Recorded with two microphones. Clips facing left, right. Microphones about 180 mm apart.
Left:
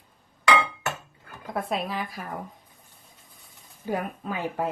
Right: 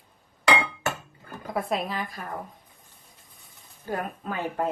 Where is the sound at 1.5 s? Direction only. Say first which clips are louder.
Right 1 dB; centre (ahead or behind).